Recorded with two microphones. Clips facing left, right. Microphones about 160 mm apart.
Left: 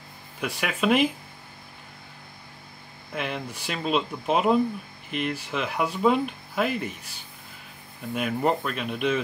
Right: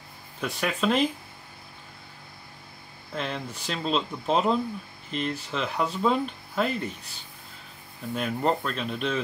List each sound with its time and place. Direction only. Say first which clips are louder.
0.4 s speech: even; 5° left (ahead or behind)
3.2 s speech: left 1 dB; 10° left (ahead or behind)
8.1 s speech: left 1 dB; 5° left (ahead or behind)